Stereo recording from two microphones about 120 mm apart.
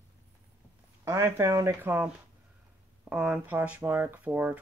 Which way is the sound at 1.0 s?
25° right (ahead or behind).